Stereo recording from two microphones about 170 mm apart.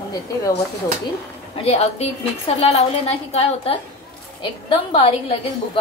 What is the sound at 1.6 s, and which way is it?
A woman's voice, 35° left (ahead or behind).